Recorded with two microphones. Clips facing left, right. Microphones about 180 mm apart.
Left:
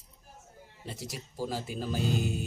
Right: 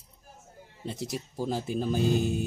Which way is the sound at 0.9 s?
20° right (ahead or behind).